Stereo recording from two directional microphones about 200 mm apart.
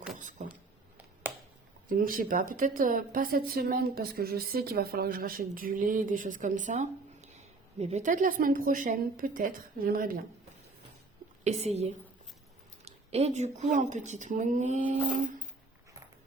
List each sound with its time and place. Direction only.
0.2 s vehicle: 40° right (ahead or behind)
1.9 s a woman's voice: 45° right (ahead or behind)
11.4 s speech: 30° right (ahead or behind)